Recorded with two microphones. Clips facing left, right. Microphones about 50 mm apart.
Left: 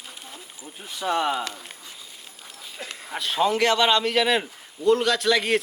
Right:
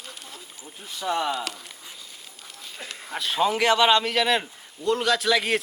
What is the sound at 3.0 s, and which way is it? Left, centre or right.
A man's voice, centre.